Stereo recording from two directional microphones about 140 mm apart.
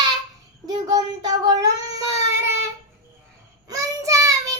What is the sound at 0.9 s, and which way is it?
Child singing, 25° right (ahead or behind).